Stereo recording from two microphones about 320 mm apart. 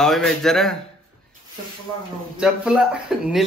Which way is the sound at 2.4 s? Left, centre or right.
Centre.